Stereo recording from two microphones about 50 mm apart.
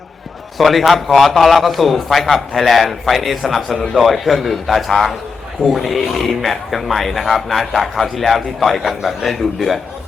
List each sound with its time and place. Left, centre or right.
0.6 s speech: centre